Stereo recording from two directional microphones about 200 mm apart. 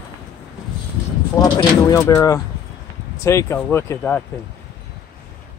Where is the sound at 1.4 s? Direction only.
15° left (ahead or behind).